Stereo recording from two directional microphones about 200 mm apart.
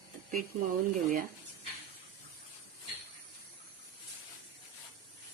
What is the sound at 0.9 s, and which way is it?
Speech, 40° right (ahead or behind).